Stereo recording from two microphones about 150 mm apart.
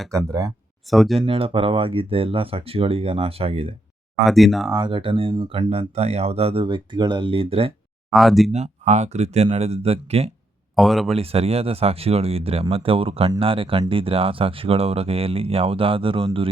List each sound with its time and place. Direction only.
0.3 s speech: 25° right (ahead or behind)
0.9 s speech: centre (ahead or behind)
1.2 s speech: 40° right (ahead or behind)
4.3 s speech: centre (ahead or behind)
4.7 s speech: 35° right (ahead or behind)
8.1 s speech: centre (ahead or behind)
8.5 s speech: 50° right (ahead or behind)
10.8 s speech: centre (ahead or behind)
11.1 s speech: 40° right (ahead or behind)